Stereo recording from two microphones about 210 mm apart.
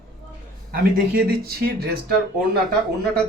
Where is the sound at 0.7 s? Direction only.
45° right (ahead or behind).